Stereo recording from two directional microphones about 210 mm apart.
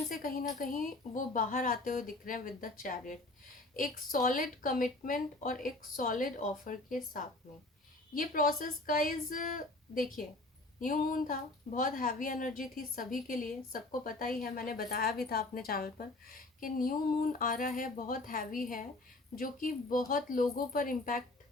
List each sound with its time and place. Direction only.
0.6 s a woman's voice: 40° left (ahead or behind)